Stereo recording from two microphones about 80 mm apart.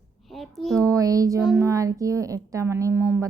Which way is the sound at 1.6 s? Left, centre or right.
Right.